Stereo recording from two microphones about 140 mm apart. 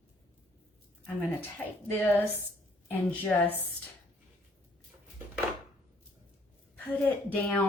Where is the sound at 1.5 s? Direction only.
15° left (ahead or behind).